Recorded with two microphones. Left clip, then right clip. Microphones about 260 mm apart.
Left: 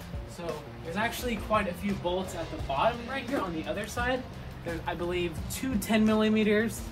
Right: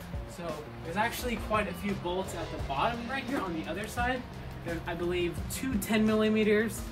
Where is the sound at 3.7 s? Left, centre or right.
Centre.